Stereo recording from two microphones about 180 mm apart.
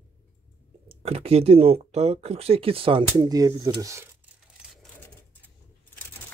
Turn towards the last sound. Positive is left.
turn(degrees=-5)  # may be behind; listen again after turning